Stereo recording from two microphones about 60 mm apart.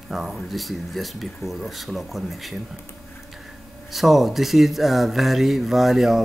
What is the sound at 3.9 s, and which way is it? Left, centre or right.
Speech, centre.